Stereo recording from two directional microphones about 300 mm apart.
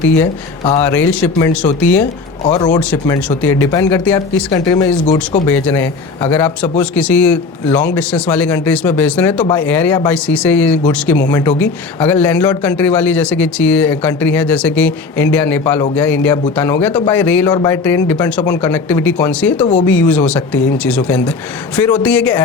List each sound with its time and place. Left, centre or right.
0.2 s speech: centre
2.4 s speech: centre
2.9 s a man's voice: centre